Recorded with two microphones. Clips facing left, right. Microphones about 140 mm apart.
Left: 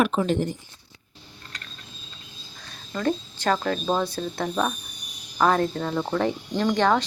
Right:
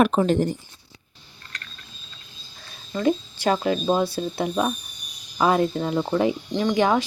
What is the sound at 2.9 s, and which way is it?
Speech, 10° right (ahead or behind).